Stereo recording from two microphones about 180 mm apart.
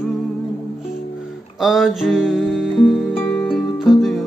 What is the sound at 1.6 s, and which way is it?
Music, centre (ahead or behind).